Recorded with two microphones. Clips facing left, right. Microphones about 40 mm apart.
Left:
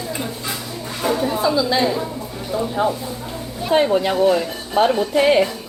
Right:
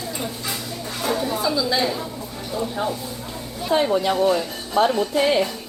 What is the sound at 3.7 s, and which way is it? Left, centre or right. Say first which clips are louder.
Speech: left 3 dB; left.